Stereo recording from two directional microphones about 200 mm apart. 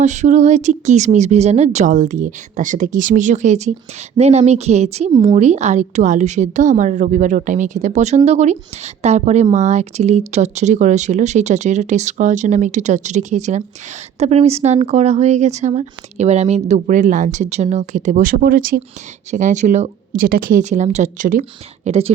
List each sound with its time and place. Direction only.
0.0 s a woman's voice: 35° right (ahead or behind)
5.1 s speech: 20° right (ahead or behind)
5.4 s a woman's voice: 35° right (ahead or behind)
21.8 s a woman's voice: 30° right (ahead or behind)